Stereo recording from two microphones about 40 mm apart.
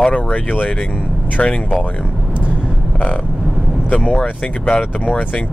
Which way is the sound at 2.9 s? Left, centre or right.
Left.